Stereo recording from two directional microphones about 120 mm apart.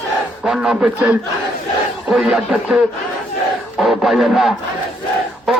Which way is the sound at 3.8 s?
Centre (ahead or behind).